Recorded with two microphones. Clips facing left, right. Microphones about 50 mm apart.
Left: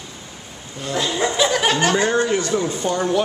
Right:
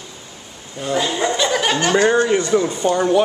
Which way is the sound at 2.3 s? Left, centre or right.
Centre.